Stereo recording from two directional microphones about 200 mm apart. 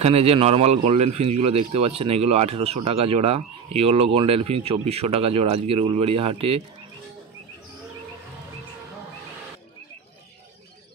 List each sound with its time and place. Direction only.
0.0 s speech: 30° right (ahead or behind)